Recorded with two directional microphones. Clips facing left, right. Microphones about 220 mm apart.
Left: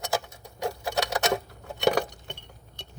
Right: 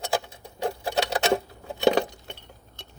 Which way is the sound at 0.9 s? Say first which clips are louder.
Right 3 dB; 30° right (ahead or behind).